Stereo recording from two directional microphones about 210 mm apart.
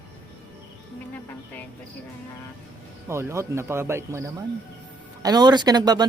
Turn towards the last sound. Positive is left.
turn(degrees=-20)  # may be behind; listen again after turning